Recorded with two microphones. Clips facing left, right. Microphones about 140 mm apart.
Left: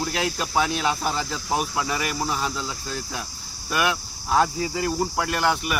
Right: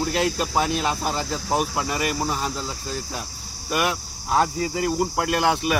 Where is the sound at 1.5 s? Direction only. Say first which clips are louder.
Right 2 dB; centre (ahead or behind).